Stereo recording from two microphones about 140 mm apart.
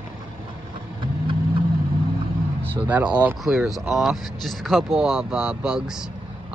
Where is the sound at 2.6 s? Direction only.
10° right (ahead or behind).